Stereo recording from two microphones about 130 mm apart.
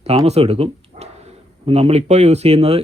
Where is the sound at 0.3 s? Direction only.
50° right (ahead or behind).